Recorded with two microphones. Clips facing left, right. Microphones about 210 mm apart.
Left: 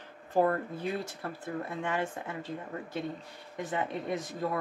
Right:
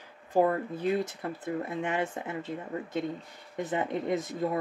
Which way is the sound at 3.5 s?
25° right (ahead or behind).